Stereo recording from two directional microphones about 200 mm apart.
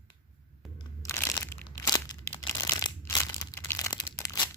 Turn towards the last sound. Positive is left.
turn(degrees=15)  # may be behind; listen again after turning